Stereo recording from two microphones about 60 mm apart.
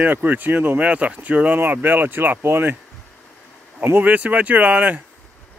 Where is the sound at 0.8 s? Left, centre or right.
Right.